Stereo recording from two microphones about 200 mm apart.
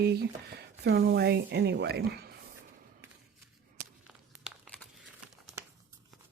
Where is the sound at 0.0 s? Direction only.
55° right (ahead or behind).